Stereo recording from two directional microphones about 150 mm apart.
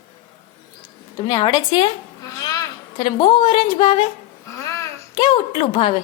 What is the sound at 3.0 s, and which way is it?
A woman's voice, 35° left (ahead or behind).